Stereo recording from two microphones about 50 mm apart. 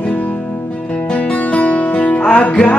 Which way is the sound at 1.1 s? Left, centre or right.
Left.